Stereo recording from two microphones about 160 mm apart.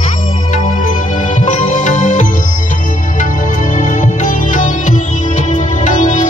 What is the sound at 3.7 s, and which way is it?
Music, 50° left (ahead or behind).